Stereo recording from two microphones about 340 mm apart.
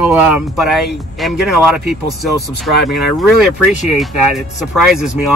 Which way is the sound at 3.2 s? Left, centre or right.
Centre.